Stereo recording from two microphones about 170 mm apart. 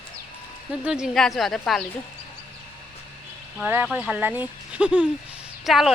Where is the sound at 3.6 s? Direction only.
10° right (ahead or behind).